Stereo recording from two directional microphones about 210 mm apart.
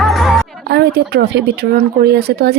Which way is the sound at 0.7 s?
50° right (ahead or behind).